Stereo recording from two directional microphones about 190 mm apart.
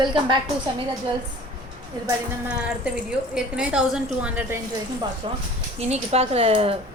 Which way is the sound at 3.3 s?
5° right (ahead or behind).